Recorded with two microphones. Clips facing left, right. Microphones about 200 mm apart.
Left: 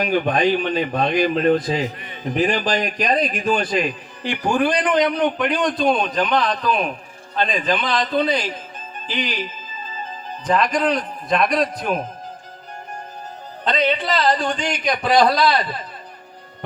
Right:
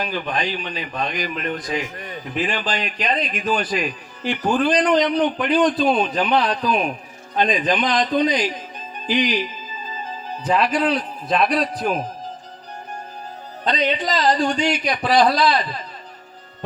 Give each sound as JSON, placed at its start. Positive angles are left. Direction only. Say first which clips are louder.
{"t": 0.0, "sound": "a man's voice", "louder": "left 7 dB", "side_deg": 50}
{"t": 0.9, "sound": "speech", "louder": "left 6 dB", "side_deg": 35}
{"t": 2.0, "sound": "a man's voice", "louder": "right 5 dB", "side_deg": -45}
{"t": 2.4, "sound": "speech", "louder": "left 5 dB", "side_deg": 40}
{"t": 3.4, "sound": "a man's voice", "louder": "left 2 dB", "side_deg": -5}
{"t": 4.4, "sound": "a man's voice", "louder": "right 1 dB", "side_deg": 10}
{"t": 10.4, "sound": "a man's voice", "louder": "even", "side_deg": -10}
{"t": 13.7, "sound": "a man's voice", "louder": "left 1 dB", "side_deg": -15}